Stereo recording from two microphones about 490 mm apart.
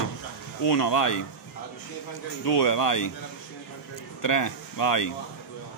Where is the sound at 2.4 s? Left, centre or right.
Left.